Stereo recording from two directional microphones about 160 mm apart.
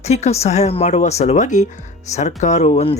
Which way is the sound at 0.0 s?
45° left (ahead or behind).